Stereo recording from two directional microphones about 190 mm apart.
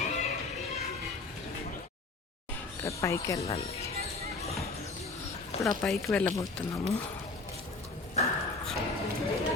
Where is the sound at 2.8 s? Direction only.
15° left (ahead or behind).